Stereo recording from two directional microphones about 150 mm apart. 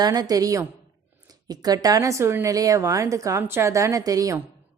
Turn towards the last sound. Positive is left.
turn(degrees=-25)  # may be behind; listen again after turning